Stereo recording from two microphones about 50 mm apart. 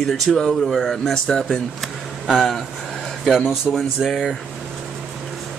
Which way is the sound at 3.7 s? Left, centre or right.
Left.